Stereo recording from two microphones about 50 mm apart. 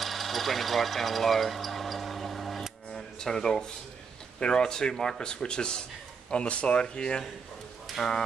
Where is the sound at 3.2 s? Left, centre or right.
Centre.